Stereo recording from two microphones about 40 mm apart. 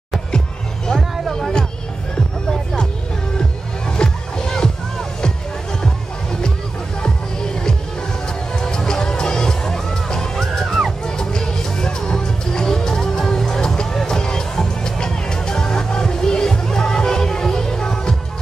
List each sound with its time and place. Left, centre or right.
3.3 s music: left
8.5 s music: centre
10.6 s music: centre
11.1 s music: centre